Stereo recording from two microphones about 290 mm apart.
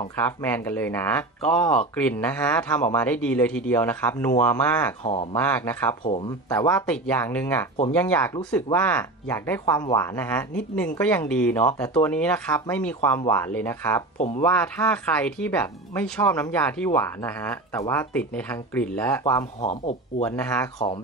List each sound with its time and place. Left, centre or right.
0.2 s speech: centre
5.0 s speech: centre
5.3 s speech: centre
14.1 s speech: left
14.4 s speech: centre
19.6 s speech: left
20.2 s speech: centre